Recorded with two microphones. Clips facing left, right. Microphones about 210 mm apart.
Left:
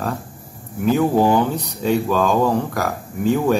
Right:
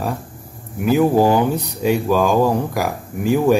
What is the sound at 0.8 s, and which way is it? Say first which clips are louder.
Speech: right 2 dB; 10° right (ahead or behind).